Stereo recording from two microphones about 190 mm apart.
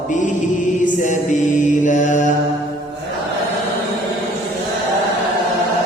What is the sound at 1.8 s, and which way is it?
Mantra, 40° left (ahead or behind).